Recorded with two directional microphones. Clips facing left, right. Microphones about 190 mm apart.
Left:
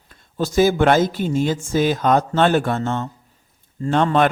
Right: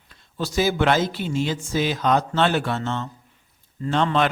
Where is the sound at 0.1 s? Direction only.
45° left (ahead or behind).